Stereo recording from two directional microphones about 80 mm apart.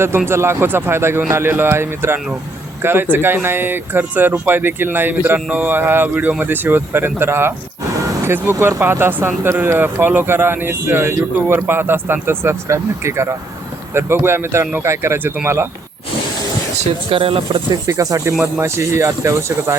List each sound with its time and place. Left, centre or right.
0.3 s speech: right
17.2 s speech: right
17.8 s speech: right